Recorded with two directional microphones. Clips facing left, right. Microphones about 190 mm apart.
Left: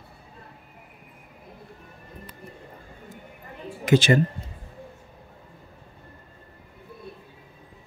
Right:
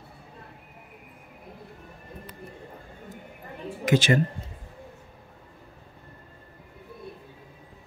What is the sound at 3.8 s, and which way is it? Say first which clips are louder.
Speech: left 3 dB; 30° left (ahead or behind).